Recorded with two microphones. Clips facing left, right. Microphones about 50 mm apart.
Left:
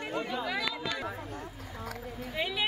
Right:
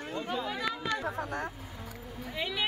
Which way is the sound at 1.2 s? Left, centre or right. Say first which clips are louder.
Right 6 dB; right.